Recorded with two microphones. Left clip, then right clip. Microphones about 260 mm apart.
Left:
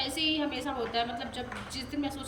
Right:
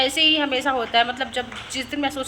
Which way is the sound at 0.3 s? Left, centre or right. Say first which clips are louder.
Right 12 dB; centre.